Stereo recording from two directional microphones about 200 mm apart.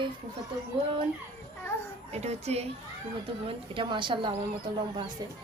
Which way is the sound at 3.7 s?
25° right (ahead or behind).